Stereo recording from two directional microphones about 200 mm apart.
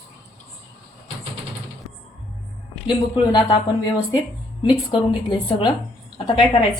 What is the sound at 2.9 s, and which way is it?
Speech, 25° left (ahead or behind).